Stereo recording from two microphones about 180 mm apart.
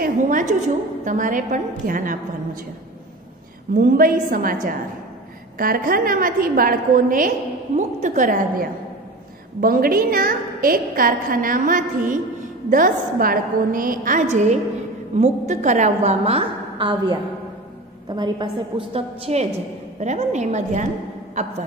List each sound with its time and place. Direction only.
0.0 s a woman's voice: 45° right (ahead or behind)
3.7 s a woman's voice: 50° right (ahead or behind)
5.6 s a woman's voice: 55° right (ahead or behind)